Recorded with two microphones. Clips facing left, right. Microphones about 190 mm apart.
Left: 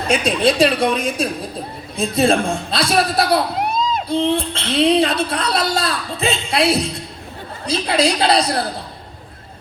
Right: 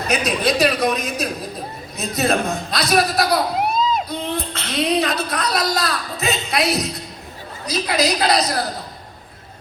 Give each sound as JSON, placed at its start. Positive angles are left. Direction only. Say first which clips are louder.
{"t": 0.1, "sound": "a woman's voice", "louder": "left 3 dB", "side_deg": 30}